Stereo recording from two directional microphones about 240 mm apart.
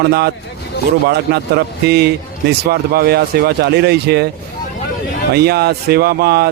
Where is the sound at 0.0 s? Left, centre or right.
Right.